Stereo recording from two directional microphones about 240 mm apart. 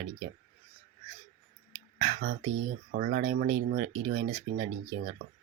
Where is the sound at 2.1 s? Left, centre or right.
Right.